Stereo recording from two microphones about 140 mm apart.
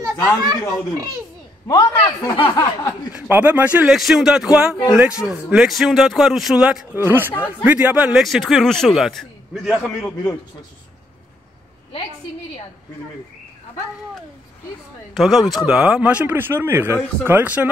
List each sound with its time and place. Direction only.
0.0 s a child's voice: 25° right (ahead or behind)
1.7 s a man's voice: 25° left (ahead or behind)
3.2 s speech: 15° right (ahead or behind)
15.1 s speech: centre (ahead or behind)